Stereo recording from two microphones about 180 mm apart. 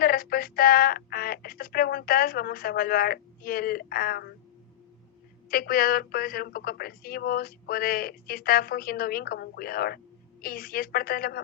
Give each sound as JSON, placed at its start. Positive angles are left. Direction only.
{"t": 0.0, "sound": "speech", "side_deg": 55}
{"t": 5.5, "sound": "a woman's voice", "side_deg": 55}